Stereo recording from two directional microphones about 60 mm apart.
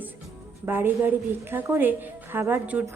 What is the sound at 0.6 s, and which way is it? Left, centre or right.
A woman's voice, right.